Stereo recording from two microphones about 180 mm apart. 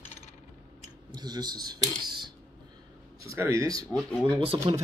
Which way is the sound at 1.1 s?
20° right (ahead or behind).